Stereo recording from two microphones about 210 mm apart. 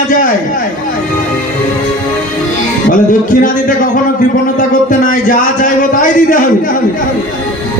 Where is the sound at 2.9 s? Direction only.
40° left (ahead or behind).